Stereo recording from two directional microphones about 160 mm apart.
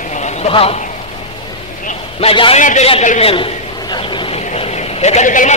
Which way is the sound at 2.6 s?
50° left (ahead or behind).